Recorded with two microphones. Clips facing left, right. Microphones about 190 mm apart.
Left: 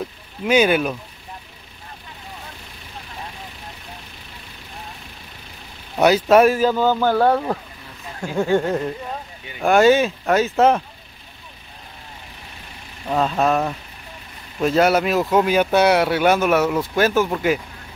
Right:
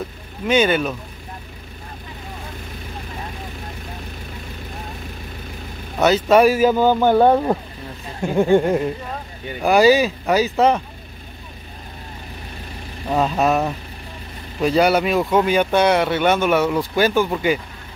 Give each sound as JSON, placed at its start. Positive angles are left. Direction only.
{"t": 0.5, "sound": "speech", "side_deg": 5}
{"t": 5.9, "sound": "speech", "side_deg": 10}
{"t": 6.6, "sound": "speech", "side_deg": -15}
{"t": 9.6, "sound": "speech", "side_deg": 0}
{"t": 13.1, "sound": "speech", "side_deg": -5}